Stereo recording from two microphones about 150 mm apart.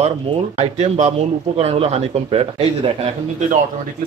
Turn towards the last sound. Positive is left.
turn(degrees=-50)  # may be behind; listen again after turning